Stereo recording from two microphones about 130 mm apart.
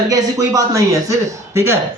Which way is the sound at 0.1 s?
25° right (ahead or behind).